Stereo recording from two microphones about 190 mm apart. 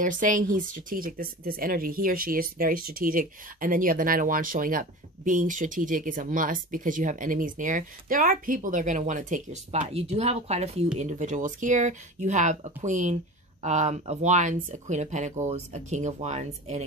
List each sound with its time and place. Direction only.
0.0 s speech: 45° right (ahead or behind)